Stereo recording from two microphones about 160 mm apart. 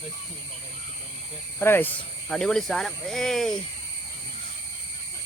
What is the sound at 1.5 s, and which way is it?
Speech, 15° left (ahead or behind).